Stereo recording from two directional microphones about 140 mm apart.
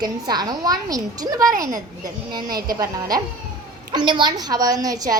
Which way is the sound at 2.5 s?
90° right.